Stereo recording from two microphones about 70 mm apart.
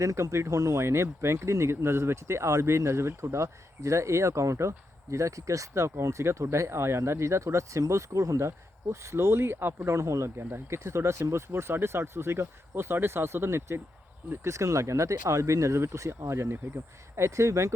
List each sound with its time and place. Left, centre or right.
0.0 s speech: right
0.9 s speech: right